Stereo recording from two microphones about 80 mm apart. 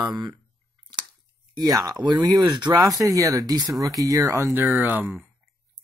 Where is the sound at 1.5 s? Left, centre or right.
Right.